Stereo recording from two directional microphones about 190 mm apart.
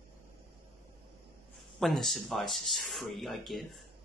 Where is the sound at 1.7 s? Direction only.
Centre (ahead or behind).